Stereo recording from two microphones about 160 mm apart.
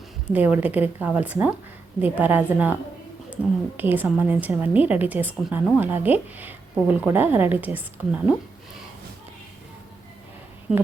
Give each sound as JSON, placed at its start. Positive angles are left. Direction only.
{"t": 0.3, "sound": "speech", "side_deg": -10}
{"t": 3.8, "sound": "speech", "side_deg": -10}